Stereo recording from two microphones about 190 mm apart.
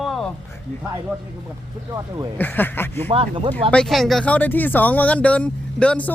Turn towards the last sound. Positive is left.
turn(degrees=5)  # may be behind; listen again after turning